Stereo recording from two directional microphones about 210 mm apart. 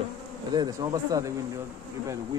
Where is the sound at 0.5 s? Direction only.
20° right (ahead or behind).